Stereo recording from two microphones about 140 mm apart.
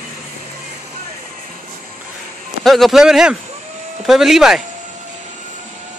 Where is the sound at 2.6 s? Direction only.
Centre (ahead or behind).